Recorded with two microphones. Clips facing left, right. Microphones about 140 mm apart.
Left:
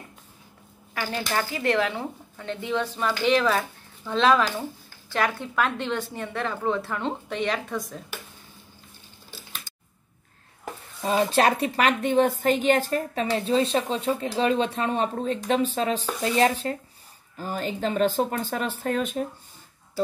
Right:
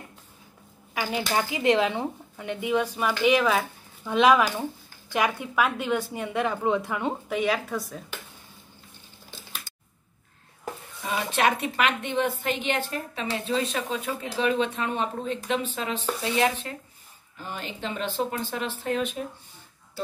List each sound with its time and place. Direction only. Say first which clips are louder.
0.9 s speech: right 1 dB; 15° right (ahead or behind)
11.0 s a woman's voice: left 5 dB; 30° left (ahead or behind)